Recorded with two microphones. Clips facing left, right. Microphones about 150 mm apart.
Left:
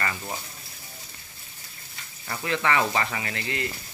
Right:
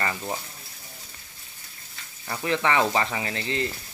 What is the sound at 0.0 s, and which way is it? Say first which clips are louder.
Speech: right 2 dB; 20° right (ahead or behind).